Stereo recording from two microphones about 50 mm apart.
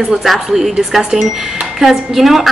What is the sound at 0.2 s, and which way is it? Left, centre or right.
A woman's voice, centre.